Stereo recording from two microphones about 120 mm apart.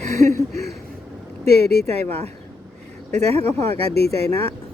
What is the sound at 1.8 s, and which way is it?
Speech, 60° right (ahead or behind).